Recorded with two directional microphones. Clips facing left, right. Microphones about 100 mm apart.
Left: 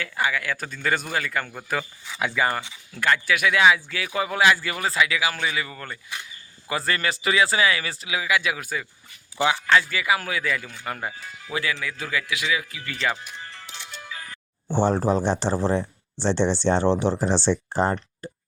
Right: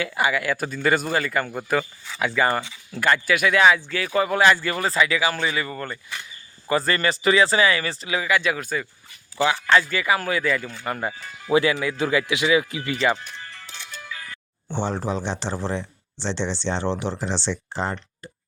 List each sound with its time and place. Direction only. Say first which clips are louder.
0.0 s speech: right 3 dB; 10° right (ahead or behind)
2.0 s speech: right 1 dB; 10° left (ahead or behind)
3.0 s speech: right 2 dB; centre (ahead or behind)
9.4 s speech: right 1 dB; 15° left (ahead or behind)
9.6 s speech: right 2 dB; centre (ahead or behind)
11.8 s a man's voice: right 7 dB; 25° right (ahead or behind)
13.5 s music: even; 20° left (ahead or behind)
14.0 s speech: right 1 dB; 35° left (ahead or behind)